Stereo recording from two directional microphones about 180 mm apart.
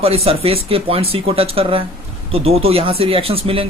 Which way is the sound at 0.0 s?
35° right (ahead or behind).